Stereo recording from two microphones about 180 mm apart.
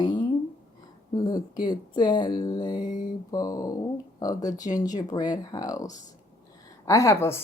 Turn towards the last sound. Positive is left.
turn(degrees=15)  # may be behind; listen again after turning